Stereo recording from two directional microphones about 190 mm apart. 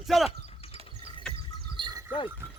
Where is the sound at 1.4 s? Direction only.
25° right (ahead or behind).